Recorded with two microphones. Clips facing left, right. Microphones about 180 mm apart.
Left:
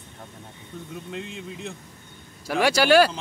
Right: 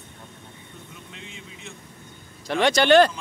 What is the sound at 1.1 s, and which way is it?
Speech, 65° left (ahead or behind).